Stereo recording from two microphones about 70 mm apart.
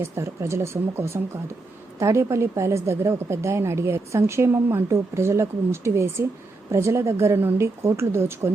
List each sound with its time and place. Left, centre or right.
0.0 s a woman's voice: right